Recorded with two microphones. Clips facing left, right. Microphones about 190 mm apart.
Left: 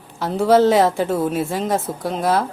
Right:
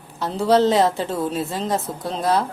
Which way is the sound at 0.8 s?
5° left (ahead or behind).